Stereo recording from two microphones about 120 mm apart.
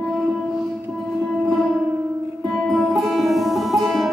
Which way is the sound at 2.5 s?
Centre (ahead or behind).